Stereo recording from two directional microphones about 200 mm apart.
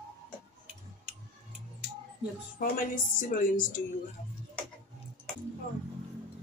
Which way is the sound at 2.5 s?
40° left (ahead or behind).